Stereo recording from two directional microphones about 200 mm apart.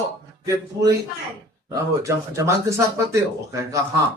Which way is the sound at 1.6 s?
15° right (ahead or behind).